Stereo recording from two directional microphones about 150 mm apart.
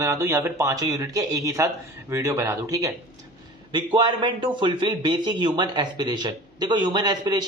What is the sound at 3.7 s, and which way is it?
A man's voice, 35° right (ahead or behind).